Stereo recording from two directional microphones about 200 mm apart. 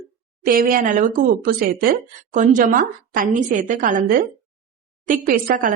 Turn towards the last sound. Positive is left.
turn(degrees=-45)  # may be behind; listen again after turning